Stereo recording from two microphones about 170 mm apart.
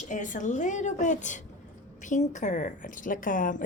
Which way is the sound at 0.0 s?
45° left (ahead or behind).